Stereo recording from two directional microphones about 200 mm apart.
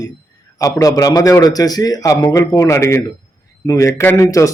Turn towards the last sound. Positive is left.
turn(degrees=15)  # may be behind; listen again after turning